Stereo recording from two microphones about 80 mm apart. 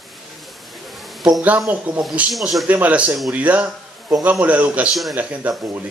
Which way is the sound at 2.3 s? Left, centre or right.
Centre.